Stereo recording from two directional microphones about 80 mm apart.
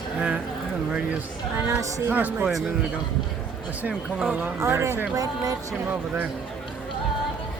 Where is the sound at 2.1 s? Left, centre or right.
Right.